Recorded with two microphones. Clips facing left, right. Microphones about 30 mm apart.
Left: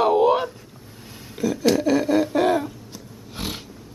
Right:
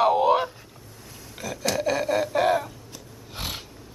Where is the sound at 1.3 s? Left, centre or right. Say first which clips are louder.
Left 10 dB; centre.